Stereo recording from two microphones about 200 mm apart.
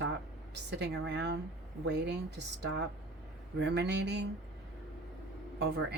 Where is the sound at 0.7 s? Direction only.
60° right (ahead or behind).